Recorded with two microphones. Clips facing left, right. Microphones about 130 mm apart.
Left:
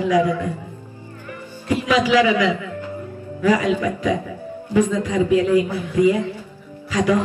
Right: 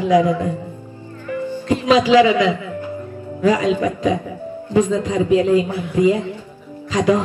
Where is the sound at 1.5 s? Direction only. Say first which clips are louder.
Right 4 dB; 15° right (ahead or behind).